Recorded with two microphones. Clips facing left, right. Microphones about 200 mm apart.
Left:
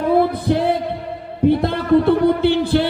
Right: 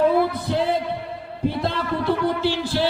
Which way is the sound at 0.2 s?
55° left (ahead or behind).